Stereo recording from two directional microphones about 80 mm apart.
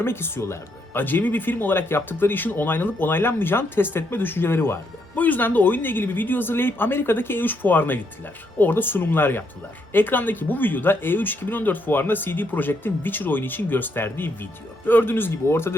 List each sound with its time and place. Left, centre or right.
0.0 s speech: left
1.0 s speech: left